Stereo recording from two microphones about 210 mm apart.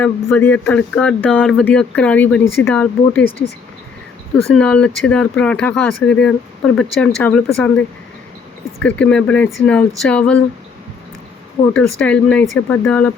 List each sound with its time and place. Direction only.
0.0 s speech: 10° left (ahead or behind)
4.5 s speech: 5° left (ahead or behind)
11.6 s speech: 20° left (ahead or behind)
11.9 s speech: 5° left (ahead or behind)